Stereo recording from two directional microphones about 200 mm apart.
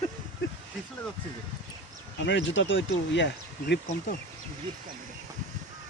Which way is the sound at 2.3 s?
65° left (ahead or behind).